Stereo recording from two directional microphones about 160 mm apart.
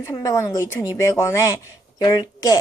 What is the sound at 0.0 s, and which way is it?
Speech, 20° left (ahead or behind).